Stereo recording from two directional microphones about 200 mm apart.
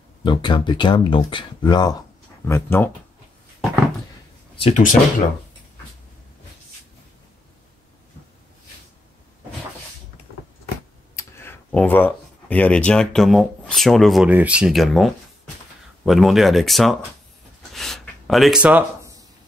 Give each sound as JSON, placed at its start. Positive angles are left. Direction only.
{"t": 0.2, "sound": "speech", "side_deg": 25}
{"t": 4.6, "sound": "speech", "side_deg": 35}
{"t": 11.1, "sound": "speech", "side_deg": 10}
{"t": 17.7, "sound": "gasp", "side_deg": 0}